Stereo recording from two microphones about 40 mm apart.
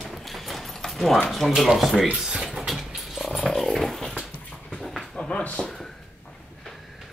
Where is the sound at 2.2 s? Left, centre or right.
Centre.